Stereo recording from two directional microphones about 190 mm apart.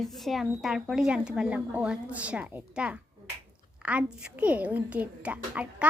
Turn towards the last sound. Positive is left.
turn(degrees=-5)  # may be behind; listen again after turning